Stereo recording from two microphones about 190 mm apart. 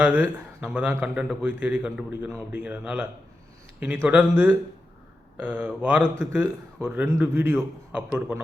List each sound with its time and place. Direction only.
0.0 s a man's voice: 10° right (ahead or behind)